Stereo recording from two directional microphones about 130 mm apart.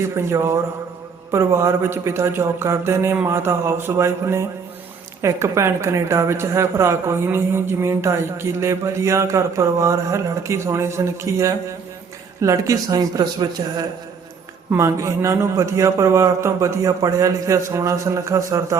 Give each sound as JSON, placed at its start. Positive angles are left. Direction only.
{"t": 0.3, "sound": "a woman's voice", "side_deg": -20}